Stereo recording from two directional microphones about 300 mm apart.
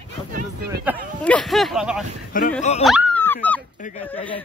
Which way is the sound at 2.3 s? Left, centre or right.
Left.